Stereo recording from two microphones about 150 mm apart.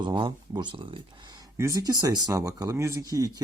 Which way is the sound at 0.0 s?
35° right (ahead or behind).